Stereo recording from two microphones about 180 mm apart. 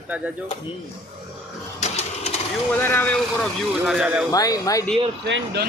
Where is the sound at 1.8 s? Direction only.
35° left (ahead or behind).